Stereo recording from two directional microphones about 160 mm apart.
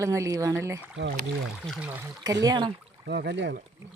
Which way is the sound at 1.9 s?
10° right (ahead or behind).